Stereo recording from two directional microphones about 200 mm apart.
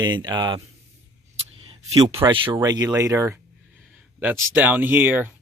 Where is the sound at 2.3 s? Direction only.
20° right (ahead or behind).